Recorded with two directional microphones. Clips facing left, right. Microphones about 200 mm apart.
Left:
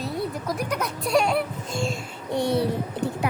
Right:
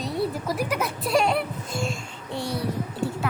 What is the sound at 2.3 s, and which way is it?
Speech, 20° left (ahead or behind).